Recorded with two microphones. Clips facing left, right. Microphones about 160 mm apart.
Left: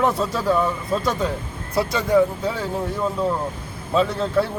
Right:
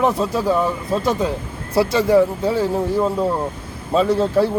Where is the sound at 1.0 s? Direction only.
25° right (ahead or behind).